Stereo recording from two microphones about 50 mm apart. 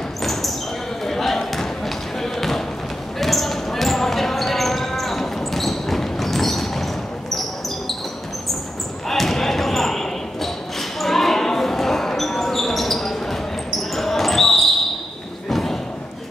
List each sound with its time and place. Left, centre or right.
0.2 s basketball bounce: centre
9.1 s basketball bounce: centre
15.5 s a sound: centre